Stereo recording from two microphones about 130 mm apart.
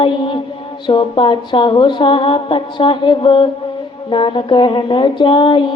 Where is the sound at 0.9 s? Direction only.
40° left (ahead or behind).